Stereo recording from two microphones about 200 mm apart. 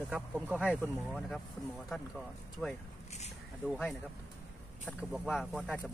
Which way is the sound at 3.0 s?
35° left (ahead or behind).